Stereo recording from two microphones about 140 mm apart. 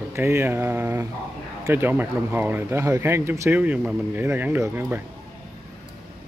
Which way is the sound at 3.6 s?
10° right (ahead or behind).